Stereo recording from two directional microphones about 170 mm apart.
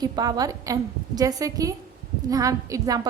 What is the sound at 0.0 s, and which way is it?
A woman's voice, 25° right (ahead or behind).